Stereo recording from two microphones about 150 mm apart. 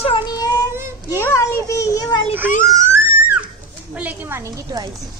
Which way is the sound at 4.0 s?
10° right (ahead or behind).